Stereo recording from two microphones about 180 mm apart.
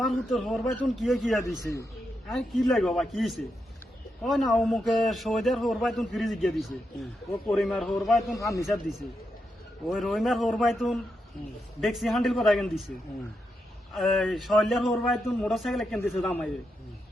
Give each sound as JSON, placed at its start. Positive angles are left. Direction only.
{"t": 0.0, "sound": "a man's voice", "side_deg": 0}
{"t": 1.6, "sound": "a man's voice", "side_deg": 15}
{"t": 2.2, "sound": "a man's voice", "side_deg": 0}
{"t": 8.4, "sound": "a man's voice", "side_deg": 15}
{"t": 9.8, "sound": "a man's voice", "side_deg": 0}
{"t": 13.9, "sound": "a man's voice", "side_deg": 0}